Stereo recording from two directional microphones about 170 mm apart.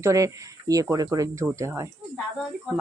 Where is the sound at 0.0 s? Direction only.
20° right (ahead or behind).